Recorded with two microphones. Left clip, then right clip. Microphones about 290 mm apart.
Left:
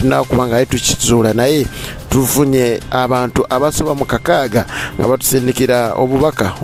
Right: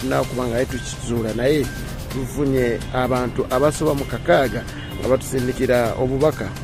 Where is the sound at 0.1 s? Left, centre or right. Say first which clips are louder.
Left 7 dB; left.